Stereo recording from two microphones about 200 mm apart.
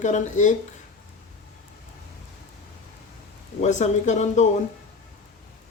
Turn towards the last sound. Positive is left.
turn(degrees=35)  # may be behind; listen again after turning